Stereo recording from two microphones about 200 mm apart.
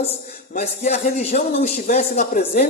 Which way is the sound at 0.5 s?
35° left (ahead or behind).